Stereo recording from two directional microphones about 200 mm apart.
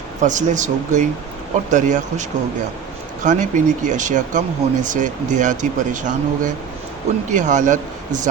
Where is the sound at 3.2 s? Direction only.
40° right (ahead or behind).